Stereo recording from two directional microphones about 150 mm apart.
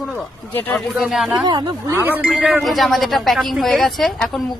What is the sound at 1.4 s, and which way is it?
Speech, 30° right (ahead or behind).